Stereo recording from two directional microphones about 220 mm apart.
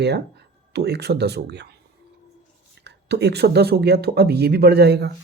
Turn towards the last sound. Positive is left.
turn(degrees=-50)  # may be behind; listen again after turning